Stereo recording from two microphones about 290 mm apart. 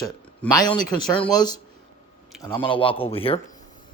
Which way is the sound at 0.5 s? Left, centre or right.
Centre.